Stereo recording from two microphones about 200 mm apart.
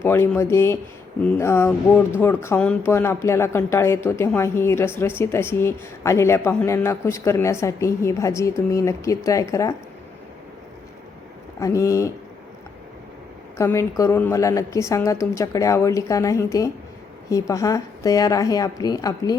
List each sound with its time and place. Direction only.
0.0 s speech: 10° left (ahead or behind)
11.6 s speech: 15° left (ahead or behind)
13.6 s speech: 15° left (ahead or behind)